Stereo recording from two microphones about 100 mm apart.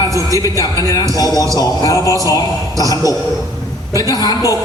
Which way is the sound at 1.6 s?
35° left (ahead or behind).